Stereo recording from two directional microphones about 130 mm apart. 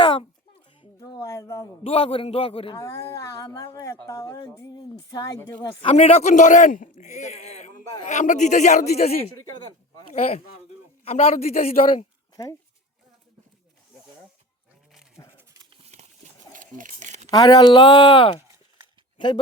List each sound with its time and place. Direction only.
0.0 s a sound: 40° left (ahead or behind)
0.9 s speech: 25° left (ahead or behind)
1.8 s a man's voice: 50° left (ahead or behind)
2.7 s speech: 20° left (ahead or behind)
5.5 s a man's voice: 50° left (ahead or behind)
12.4 s speech: 25° left (ahead or behind)
15.2 s dog: 25° left (ahead or behind)
15.8 s a sound: 60° right (ahead or behind)
17.3 s speech: 30° left (ahead or behind)
19.1 s a sound: 35° left (ahead or behind)